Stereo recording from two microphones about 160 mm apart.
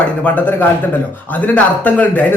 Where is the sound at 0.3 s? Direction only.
10° left (ahead or behind).